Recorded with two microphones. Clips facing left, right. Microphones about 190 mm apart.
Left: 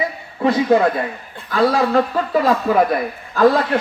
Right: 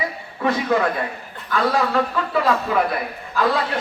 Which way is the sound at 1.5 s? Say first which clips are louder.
Left 4 dB; 35° left (ahead or behind).